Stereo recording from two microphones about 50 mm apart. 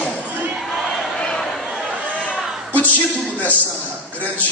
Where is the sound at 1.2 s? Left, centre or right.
Centre.